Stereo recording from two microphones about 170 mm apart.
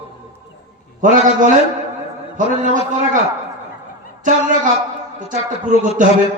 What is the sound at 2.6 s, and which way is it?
Speech, 50° right (ahead or behind).